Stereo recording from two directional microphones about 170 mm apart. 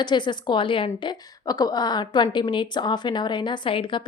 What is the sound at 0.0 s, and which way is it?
A woman's voice, 25° left (ahead or behind).